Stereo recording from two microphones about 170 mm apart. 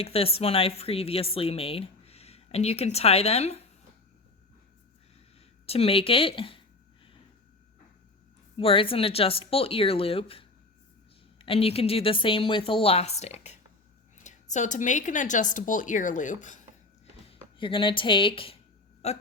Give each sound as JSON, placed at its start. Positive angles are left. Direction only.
{"t": 0.0, "sound": "a woman's voice", "side_deg": 35}
{"t": 5.6, "sound": "a woman's voice", "side_deg": 35}
{"t": 8.5, "sound": "a woman's voice", "side_deg": 30}
{"t": 17.2, "sound": "a woman's voice", "side_deg": 30}